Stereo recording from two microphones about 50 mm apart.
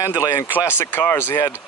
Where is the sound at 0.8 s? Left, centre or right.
Left.